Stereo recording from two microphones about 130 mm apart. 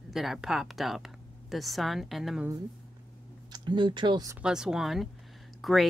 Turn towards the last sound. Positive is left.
turn(degrees=0)  # may be behind; listen again after turning